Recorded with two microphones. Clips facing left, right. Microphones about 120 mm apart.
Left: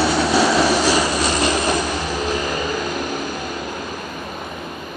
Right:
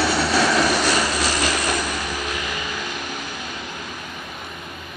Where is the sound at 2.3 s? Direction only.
40° left (ahead or behind).